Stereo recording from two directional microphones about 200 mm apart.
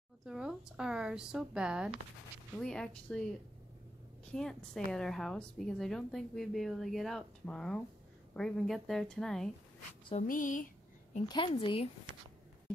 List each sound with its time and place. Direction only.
0.2 s a woman's voice: 5° right (ahead or behind)
4.3 s a woman's voice: 5° left (ahead or behind)
10.2 s speech: 40° left (ahead or behind)
11.2 s a woman's voice: 25° left (ahead or behind)